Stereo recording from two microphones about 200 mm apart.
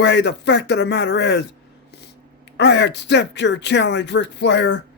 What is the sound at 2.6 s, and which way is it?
A man's voice, 60° left (ahead or behind).